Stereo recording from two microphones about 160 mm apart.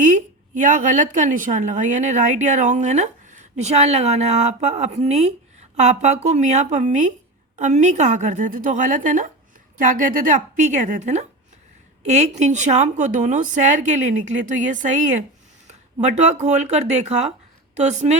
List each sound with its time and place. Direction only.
0.0 s a woman's voice: 50° right (ahead or behind)